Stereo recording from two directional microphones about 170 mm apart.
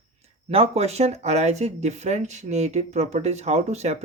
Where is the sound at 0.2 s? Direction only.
35° right (ahead or behind).